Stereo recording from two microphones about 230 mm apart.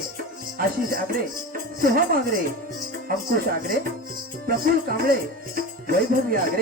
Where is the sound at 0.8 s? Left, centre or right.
Right.